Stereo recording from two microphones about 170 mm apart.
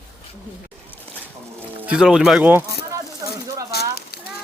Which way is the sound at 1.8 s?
5° right (ahead or behind).